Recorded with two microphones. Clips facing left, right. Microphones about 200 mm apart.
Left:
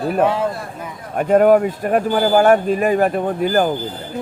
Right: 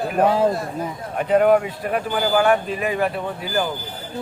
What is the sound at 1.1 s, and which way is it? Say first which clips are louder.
Speech: left 4 dB; 45° left (ahead or behind).